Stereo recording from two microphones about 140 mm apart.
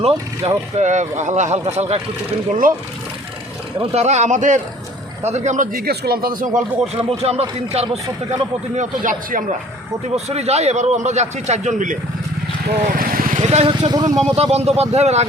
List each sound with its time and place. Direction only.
0.0 s speech: 50° right (ahead or behind)
2.5 s speech: 75° right (ahead or behind)
3.8 s speech: 50° right (ahead or behind); by 6.6 s 80° right
6.8 s a man's voice: 45° right (ahead or behind)
8.7 s speech: 65° right (ahead or behind)
10.2 s a man's voice: 50° right (ahead or behind)
12.6 s vehicle: 90° right
13.4 s a man's voice: 50° right (ahead or behind)
13.7 s speech: 30° right (ahead or behind)
14.2 s a man's voice: 45° right (ahead or behind)